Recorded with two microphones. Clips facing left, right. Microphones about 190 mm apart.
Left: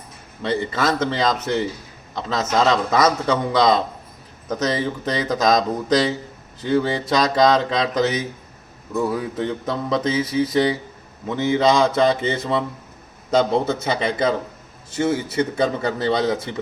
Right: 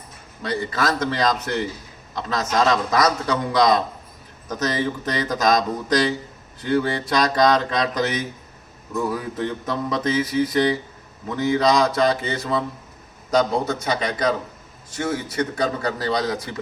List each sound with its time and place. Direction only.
0.4 s a man's voice: 25° left (ahead or behind)
9.1 s a man's voice: 25° left (ahead or behind)